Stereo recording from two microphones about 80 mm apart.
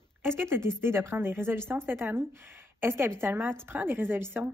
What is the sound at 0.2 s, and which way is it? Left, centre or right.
A woman's voice, right.